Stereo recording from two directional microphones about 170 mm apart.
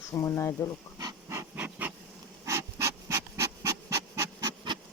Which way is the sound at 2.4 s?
15° right (ahead or behind).